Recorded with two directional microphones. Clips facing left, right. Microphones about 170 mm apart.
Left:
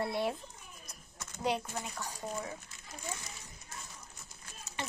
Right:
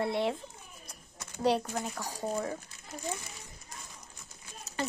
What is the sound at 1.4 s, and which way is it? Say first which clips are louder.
Speech: right 6 dB; 40° right (ahead or behind).